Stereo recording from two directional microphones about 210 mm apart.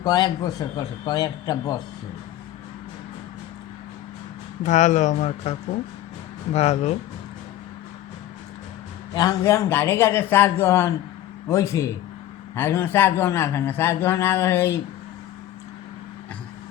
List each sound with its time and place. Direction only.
0.0 s a man's voice: 20° left (ahead or behind)
4.6 s speech: 35° left (ahead or behind)
9.1 s a man's voice: 15° left (ahead or behind)